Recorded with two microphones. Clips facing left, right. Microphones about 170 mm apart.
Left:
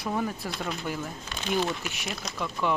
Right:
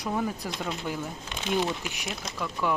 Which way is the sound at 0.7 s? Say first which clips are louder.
Even; 15° right (ahead or behind).